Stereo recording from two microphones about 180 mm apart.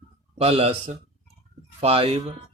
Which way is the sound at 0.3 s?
35° right (ahead or behind).